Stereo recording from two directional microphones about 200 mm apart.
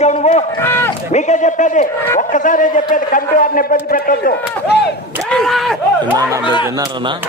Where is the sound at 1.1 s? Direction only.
35° left (ahead or behind).